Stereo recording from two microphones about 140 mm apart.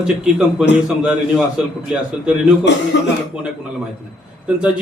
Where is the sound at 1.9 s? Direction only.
5° right (ahead or behind).